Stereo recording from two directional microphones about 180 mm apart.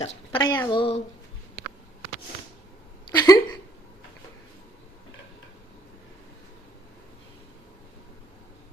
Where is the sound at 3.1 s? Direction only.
20° left (ahead or behind).